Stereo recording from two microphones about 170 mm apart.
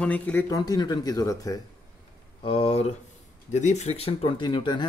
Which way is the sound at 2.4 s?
35° left (ahead or behind).